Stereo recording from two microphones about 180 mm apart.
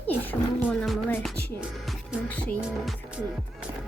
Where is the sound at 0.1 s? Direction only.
10° left (ahead or behind).